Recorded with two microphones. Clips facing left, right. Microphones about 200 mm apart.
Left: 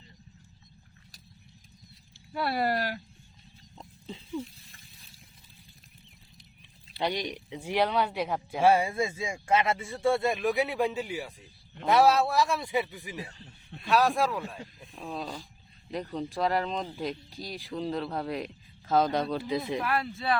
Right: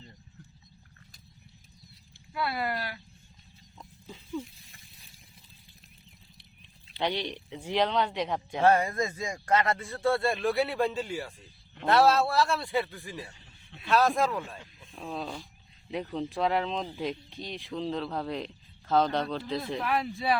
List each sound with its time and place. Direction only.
2.3 s speech: 40° left (ahead or behind)
3.8 s pig: 25° left (ahead or behind)
6.9 s speech: 10° left (ahead or behind)
10.0 s a man's voice: 20° left (ahead or behind)
14.9 s speech: centre (ahead or behind)
19.8 s speech: centre (ahead or behind)